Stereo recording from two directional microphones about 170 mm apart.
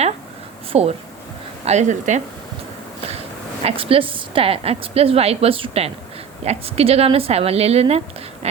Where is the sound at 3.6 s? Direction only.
35° right (ahead or behind).